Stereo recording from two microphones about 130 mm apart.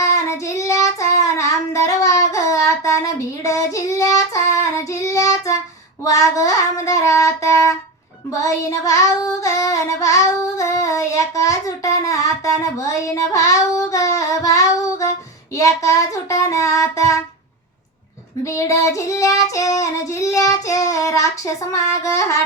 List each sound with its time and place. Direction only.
0.0 s child singing: 20° left (ahead or behind)
18.4 s child singing: 25° left (ahead or behind)